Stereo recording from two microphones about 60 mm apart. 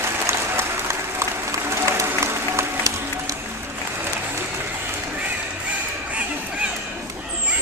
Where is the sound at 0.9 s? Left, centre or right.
Right.